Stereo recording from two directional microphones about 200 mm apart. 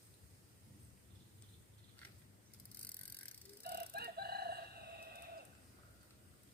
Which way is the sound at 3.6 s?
50° right (ahead or behind).